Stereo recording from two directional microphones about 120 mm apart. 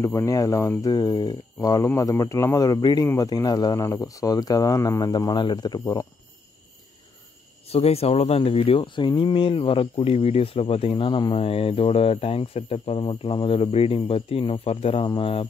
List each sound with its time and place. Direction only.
0.0 s speech: 25° left (ahead or behind)
7.6 s speech: 55° left (ahead or behind)